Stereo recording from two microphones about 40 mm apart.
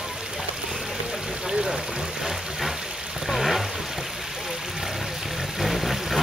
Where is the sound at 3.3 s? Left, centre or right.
Centre.